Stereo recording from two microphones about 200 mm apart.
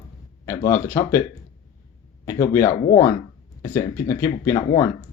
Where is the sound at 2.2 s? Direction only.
15° left (ahead or behind).